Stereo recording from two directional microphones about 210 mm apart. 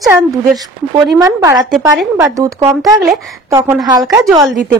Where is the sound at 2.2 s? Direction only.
15° right (ahead or behind).